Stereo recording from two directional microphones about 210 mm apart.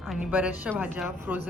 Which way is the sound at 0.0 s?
Centre (ahead or behind).